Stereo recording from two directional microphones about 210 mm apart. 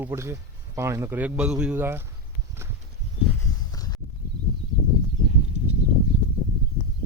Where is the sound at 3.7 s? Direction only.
15° left (ahead or behind).